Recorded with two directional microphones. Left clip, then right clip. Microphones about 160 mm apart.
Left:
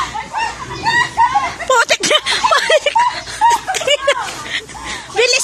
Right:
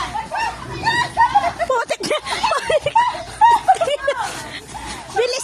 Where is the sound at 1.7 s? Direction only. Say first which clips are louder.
Left 7 dB; centre (ahead or behind).